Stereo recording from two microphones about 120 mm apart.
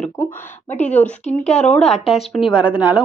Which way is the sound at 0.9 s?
10° left (ahead or behind).